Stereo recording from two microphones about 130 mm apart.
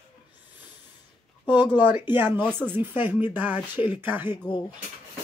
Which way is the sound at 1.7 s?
15° right (ahead or behind).